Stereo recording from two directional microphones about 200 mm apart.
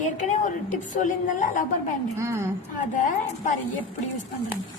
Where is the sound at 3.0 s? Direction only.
40° left (ahead or behind).